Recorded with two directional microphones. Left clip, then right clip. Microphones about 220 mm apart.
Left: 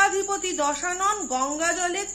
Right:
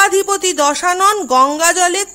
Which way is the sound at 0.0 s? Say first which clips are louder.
Right 10 dB; 45° right (ahead or behind).